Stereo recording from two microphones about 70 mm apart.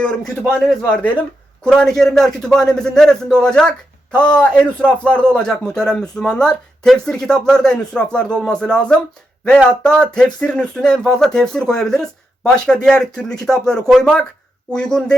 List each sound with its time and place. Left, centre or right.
0.0 s speech: centre
0.9 s speech: left
1.6 s speech: centre